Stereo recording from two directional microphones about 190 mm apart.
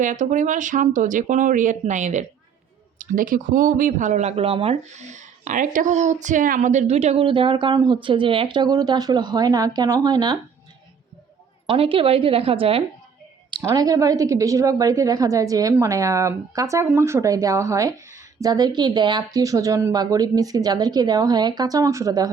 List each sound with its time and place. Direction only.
0.0 s speech: 40° right (ahead or behind); by 10.3 s 20° right (ahead or behind)
11.6 s speech: 25° right (ahead or behind)
13.5 s speech: 20° right (ahead or behind)